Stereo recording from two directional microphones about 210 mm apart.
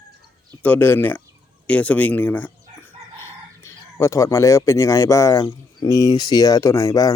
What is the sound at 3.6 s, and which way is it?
Speech, 15° left (ahead or behind).